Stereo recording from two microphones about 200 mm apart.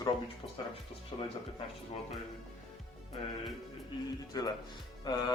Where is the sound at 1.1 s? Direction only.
20° left (ahead or behind).